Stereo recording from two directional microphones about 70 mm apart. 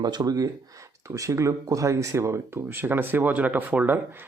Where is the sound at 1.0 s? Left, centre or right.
Right.